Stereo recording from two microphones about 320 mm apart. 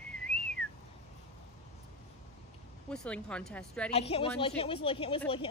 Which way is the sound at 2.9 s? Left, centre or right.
Centre.